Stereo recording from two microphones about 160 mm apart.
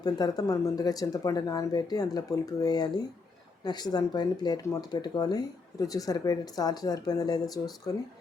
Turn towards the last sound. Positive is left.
turn(degrees=25)  # may be behind; listen again after turning